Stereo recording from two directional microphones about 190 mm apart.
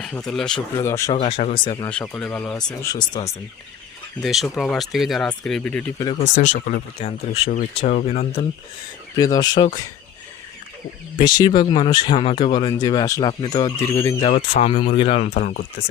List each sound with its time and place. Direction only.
0.3 s speech: 5° left (ahead or behind)
0.8 s speech: 15° left (ahead or behind)
1.1 s speech: 30° left (ahead or behind)
1.9 s speech: 5° left (ahead or behind)
2.8 s speech: 20° left (ahead or behind)
4.2 s speech: centre (ahead or behind)
6.2 s speech: 40° left (ahead or behind)
7.9 s speech: 50° left (ahead or behind)
9.1 s speech: 20° left (ahead or behind)
11.2 s speech: 20° left (ahead or behind)
14.2 s speech: 30° left (ahead or behind)